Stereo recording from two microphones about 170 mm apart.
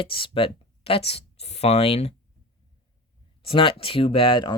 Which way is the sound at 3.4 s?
30° left (ahead or behind).